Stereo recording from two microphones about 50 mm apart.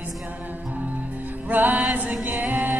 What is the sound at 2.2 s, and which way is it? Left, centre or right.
A capella, right.